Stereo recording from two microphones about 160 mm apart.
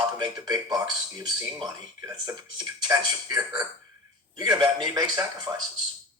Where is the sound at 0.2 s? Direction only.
25° right (ahead or behind).